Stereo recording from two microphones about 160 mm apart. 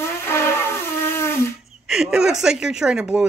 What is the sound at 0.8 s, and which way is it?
Shofar, 15° left (ahead or behind).